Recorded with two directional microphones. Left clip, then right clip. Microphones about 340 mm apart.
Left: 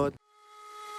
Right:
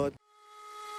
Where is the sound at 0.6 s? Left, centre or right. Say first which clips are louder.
Even; centre.